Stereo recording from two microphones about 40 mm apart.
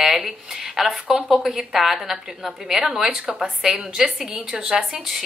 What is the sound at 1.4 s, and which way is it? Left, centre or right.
A woman's voice, centre.